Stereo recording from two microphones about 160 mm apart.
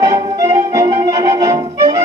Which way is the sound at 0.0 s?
25° right (ahead or behind).